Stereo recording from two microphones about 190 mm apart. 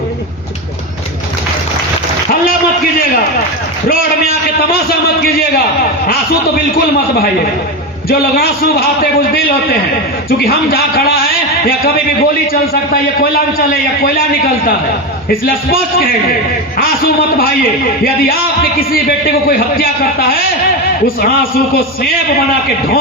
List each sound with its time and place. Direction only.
3.8 s a sound: 50° left (ahead or behind)
8.4 s a man's voice: 50° left (ahead or behind)
17.3 s a man's voice: 50° left (ahead or behind)